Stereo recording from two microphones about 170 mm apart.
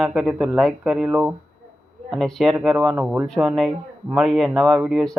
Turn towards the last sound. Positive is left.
turn(degrees=-5)  # may be behind; listen again after turning